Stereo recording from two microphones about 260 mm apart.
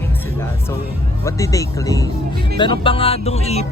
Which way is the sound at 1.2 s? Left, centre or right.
Centre.